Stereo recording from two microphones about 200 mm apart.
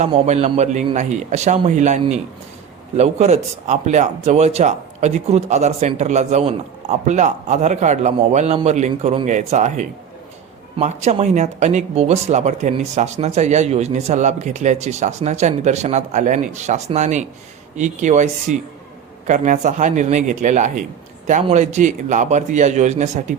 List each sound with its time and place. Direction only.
0.0 s speech: 30° right (ahead or behind)